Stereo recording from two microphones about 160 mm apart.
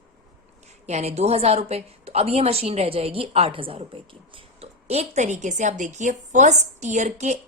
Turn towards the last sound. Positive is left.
turn(degrees=-45)  # may be behind; listen again after turning